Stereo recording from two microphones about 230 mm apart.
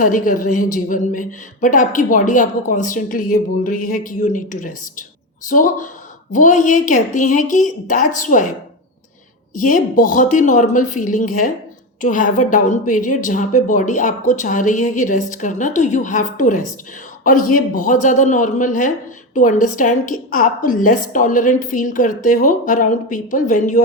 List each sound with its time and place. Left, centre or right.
0.0 s a man's voice: left
9.6 s a man's voice: left